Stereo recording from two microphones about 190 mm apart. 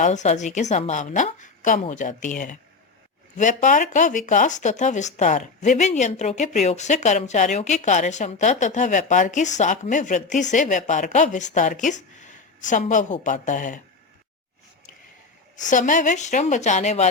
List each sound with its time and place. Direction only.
0.0 s speech: 40° left (ahead or behind)
15.5 s speech: 40° left (ahead or behind)